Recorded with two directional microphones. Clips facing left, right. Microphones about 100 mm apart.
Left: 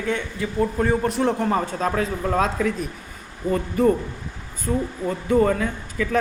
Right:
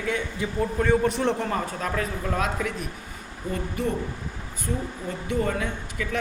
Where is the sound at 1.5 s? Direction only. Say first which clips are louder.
Left 5 dB; 25° left (ahead or behind).